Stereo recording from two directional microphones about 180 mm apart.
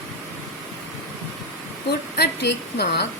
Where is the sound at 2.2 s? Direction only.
65° left (ahead or behind).